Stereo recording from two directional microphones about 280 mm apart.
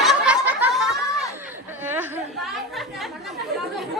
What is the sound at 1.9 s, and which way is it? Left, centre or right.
Speech, centre.